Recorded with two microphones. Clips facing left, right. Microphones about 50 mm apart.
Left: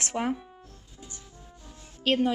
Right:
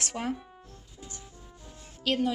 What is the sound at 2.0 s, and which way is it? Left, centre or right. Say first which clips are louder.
Speech: left 3 dB; left.